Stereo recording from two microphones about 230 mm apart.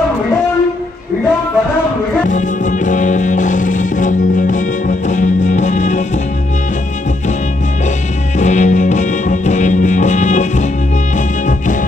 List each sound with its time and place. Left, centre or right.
2.2 s music: left
8.4 s music: left